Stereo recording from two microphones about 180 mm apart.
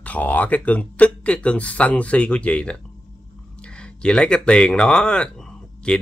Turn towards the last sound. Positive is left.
turn(degrees=5)  # may be behind; listen again after turning